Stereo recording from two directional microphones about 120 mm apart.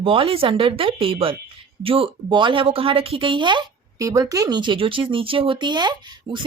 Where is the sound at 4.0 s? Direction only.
30° right (ahead or behind).